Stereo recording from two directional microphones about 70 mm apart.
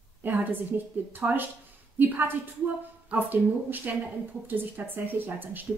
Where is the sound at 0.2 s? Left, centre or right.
Right.